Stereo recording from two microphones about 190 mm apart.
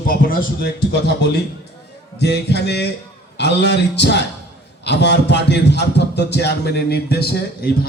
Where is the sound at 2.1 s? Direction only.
60° left (ahead or behind).